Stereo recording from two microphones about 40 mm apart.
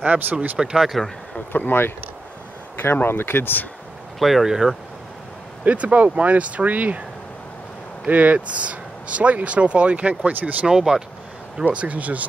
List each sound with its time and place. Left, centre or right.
0.0 s speech: right
0.6 s speech: centre
1.5 s speech: left
2.9 s speech: left
4.2 s speech: centre
4.5 s speech: centre
5.7 s speech: right
8.1 s speech: right
10.7 s speech: centre
11.7 s speech: right